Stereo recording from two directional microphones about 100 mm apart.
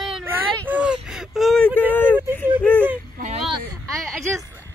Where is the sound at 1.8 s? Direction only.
15° left (ahead or behind).